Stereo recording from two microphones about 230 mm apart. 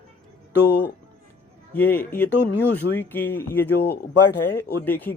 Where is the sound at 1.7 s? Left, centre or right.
Centre.